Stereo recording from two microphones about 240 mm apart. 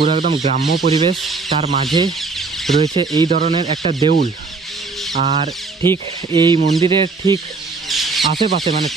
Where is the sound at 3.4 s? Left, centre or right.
Right.